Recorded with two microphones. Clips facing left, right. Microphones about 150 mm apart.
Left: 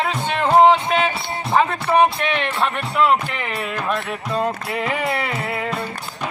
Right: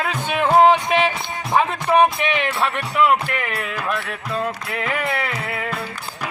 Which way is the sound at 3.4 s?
Centre (ahead or behind).